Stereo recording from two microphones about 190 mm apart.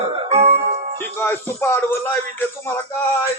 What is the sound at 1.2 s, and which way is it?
Speech, 10° left (ahead or behind).